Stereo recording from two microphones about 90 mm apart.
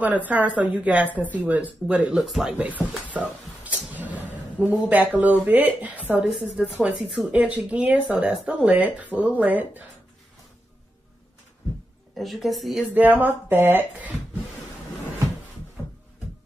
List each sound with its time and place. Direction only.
0.0 s speech: 20° right (ahead or behind)
2.1 s a woman's voice: 5° right (ahead or behind)
2.5 s speech: 15° right (ahead or behind)
3.9 s a sound: 20° right (ahead or behind)
4.8 s speech: 15° right (ahead or behind)
6.2 s speech: 5° right (ahead or behind)
12.2 s a woman's voice: centre (ahead or behind)
12.9 s speech: 20° right (ahead or behind)